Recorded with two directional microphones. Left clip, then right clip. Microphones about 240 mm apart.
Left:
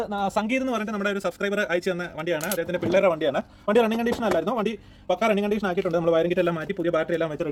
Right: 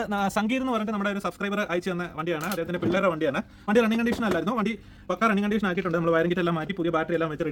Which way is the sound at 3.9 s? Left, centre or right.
Right.